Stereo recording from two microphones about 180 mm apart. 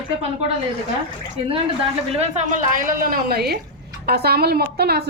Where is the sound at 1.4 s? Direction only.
35° right (ahead or behind).